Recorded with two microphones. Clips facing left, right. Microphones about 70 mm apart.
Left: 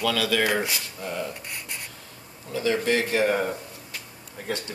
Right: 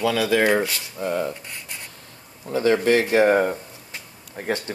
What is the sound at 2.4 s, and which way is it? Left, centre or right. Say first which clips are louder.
Speech: right 6 dB; right.